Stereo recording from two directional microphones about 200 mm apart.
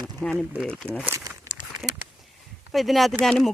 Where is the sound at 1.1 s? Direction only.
15° right (ahead or behind).